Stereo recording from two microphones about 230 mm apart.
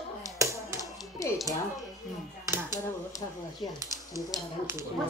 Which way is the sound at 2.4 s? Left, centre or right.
Centre.